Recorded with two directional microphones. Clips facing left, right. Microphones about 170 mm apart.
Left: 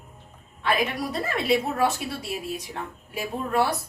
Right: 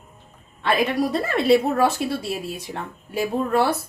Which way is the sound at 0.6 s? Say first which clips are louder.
Right 5 dB; 30° right (ahead or behind).